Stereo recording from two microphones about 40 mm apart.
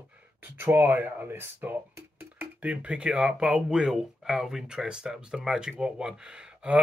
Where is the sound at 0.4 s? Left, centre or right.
Right.